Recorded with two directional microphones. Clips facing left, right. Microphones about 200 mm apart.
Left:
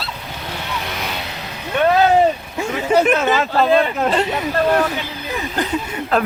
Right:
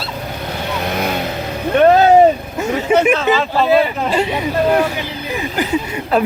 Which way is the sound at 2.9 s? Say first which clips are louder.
Right 1 dB; 10° right (ahead or behind).